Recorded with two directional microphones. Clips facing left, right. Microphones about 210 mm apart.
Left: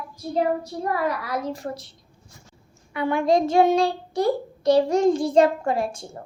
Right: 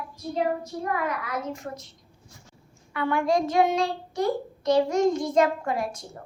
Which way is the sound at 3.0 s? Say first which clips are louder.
Left 3 dB; 15° left (ahead or behind).